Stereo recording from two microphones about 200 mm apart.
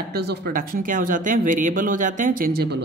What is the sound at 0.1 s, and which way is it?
Speech, 55° right (ahead or behind).